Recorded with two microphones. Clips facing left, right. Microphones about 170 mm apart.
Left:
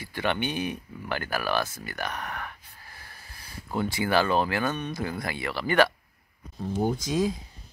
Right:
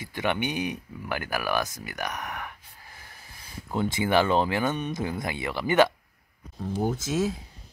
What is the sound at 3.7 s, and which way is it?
Speech, 20° right (ahead or behind).